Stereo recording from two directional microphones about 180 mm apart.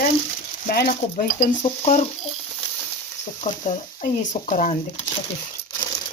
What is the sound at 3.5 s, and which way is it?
A woman's voice, 45° left (ahead or behind).